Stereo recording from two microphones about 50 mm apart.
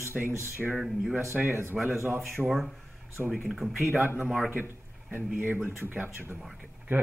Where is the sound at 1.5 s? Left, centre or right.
Right.